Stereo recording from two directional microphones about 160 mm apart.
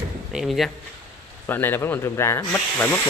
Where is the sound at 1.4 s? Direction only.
15° left (ahead or behind).